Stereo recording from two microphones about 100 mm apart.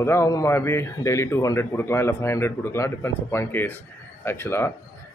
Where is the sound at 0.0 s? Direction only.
30° left (ahead or behind).